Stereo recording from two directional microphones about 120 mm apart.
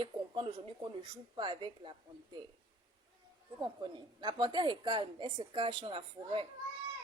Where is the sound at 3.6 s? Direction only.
40° right (ahead or behind).